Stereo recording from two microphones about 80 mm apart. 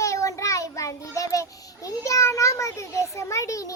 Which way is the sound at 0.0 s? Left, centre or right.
Left.